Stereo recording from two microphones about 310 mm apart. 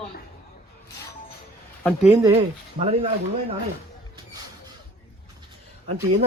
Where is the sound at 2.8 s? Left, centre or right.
Centre.